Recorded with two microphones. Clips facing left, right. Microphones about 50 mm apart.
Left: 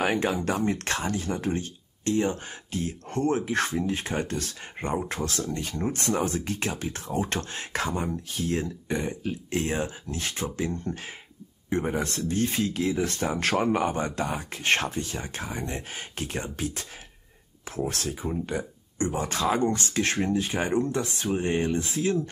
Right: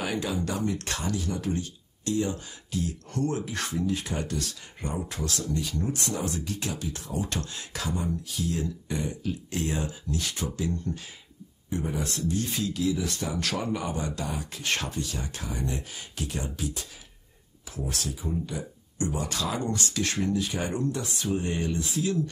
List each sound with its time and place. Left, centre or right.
0.0 s speech: left